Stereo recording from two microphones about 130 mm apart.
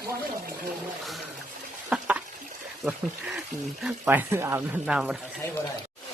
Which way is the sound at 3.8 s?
15° right (ahead or behind).